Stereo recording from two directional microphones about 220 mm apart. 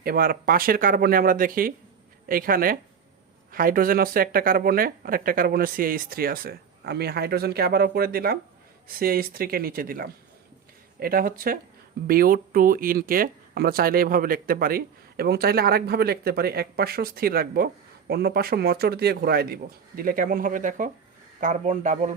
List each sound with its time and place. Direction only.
0.0 s speech: 40° right (ahead or behind)